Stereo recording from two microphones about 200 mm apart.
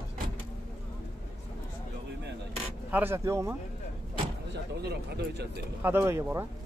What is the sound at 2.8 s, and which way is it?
Speech, 10° right (ahead or behind).